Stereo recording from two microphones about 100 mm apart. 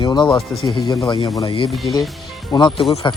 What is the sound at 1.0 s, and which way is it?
Speech, 65° left (ahead or behind).